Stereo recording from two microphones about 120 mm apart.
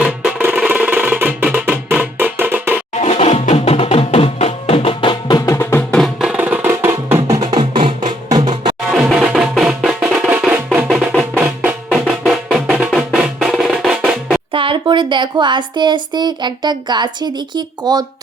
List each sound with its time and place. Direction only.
0.0 s music: 10° right (ahead or behind)
2.9 s music: 60° left (ahead or behind); by 5.4 s 45° left (ahead or behind)
5.5 s music: 20° left (ahead or behind)
6.1 s music: 10° right (ahead or behind); by 8.7 s 35° right (ahead or behind)
9.0 s music: 5° right (ahead or behind)
13.1 s drum: 5° right (ahead or behind)
14.5 s speech: 45° right (ahead or behind)